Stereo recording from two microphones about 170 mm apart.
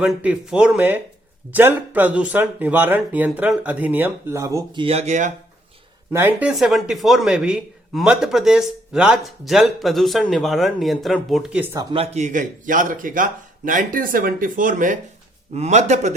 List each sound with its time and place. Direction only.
0.0 s speech: 5° right (ahead or behind); by 5.3 s 45° right (ahead or behind)
6.1 s speech: 15° right (ahead or behind)
6.5 s speech: centre (ahead or behind)
11.8 s speech: 25° right (ahead or behind)
12.1 s speech: 45° right (ahead or behind)